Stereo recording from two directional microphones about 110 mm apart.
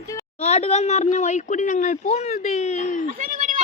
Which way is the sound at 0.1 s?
30° left (ahead or behind).